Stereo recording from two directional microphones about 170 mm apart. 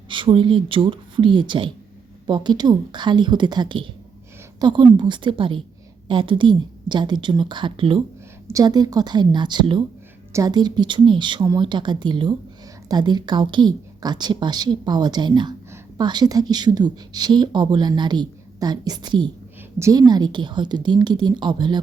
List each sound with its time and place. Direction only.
0.1 s a woman's voice: 30° right (ahead or behind)